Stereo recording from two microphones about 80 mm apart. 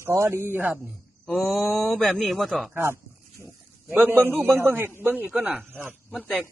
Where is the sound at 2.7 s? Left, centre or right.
Right.